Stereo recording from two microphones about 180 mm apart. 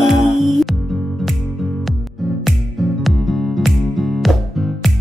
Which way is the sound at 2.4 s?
Centre (ahead or behind).